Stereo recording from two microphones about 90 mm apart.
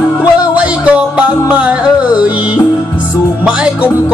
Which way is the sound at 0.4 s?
15° right (ahead or behind).